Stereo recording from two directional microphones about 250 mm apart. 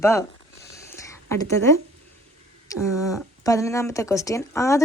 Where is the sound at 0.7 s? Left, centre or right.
Centre.